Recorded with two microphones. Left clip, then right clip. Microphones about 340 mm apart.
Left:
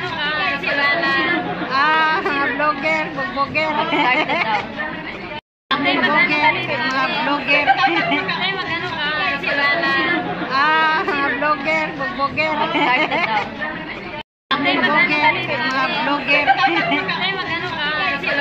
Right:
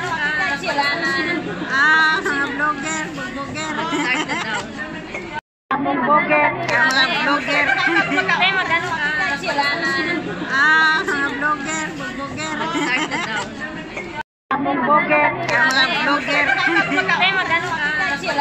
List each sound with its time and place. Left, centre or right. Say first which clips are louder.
0.8 s chatter: left 3 dB; centre
1.7 s a sound: right 2 dB; centre
3.5 s speech: left 3 dB; centre
5.7 s chatter: even; centre
7.0 s chatter: right 2 dB; centre
9.6 s a sound: left 3 dB; centre
12.4 s speech: left 3 dB; centre
14.5 s a woman's voice: even; centre
15.7 s music: right 2 dB; centre